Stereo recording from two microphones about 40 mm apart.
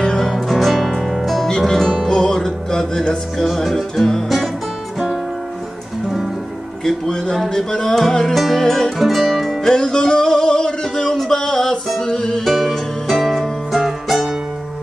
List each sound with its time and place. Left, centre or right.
0.0 s music: centre
0.3 s music: centre
3.3 s music: centre
6.8 s music: centre
8.9 s music: centre
9.7 s music: centre
12.4 s music: centre